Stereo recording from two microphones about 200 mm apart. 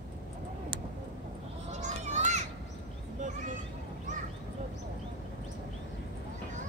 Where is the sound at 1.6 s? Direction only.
35° right (ahead or behind).